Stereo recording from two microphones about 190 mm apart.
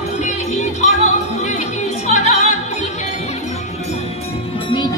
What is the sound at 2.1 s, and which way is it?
Opera, 35° left (ahead or behind).